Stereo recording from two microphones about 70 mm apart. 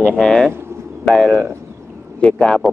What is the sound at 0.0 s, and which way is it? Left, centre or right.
Speech, centre.